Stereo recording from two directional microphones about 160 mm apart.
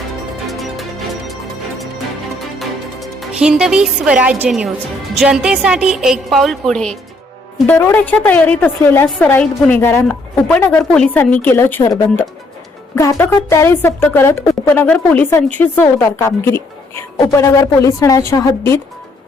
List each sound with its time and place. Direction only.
0.4 s music: centre (ahead or behind)
2.6 s a woman's voice: centre (ahead or behind)
7.7 s a woman's voice: 15° left (ahead or behind)